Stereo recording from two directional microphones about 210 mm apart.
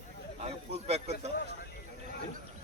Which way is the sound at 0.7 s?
30° right (ahead or behind).